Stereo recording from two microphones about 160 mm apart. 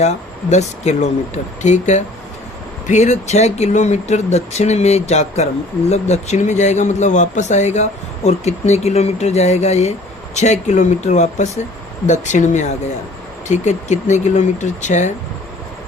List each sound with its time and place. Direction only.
0.0 s speech: 45° left (ahead or behind)